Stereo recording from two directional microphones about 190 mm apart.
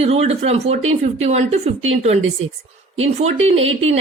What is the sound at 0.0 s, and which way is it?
Speech, 35° right (ahead or behind).